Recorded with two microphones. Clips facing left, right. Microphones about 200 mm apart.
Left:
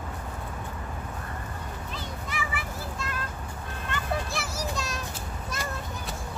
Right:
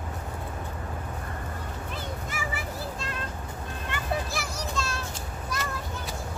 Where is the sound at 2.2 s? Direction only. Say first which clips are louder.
Even; 45° right (ahead or behind).